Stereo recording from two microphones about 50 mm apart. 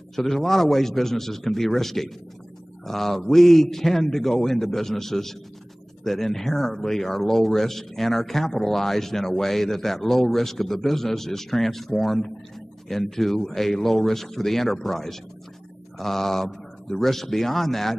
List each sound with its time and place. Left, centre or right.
0.1 s a man's voice: centre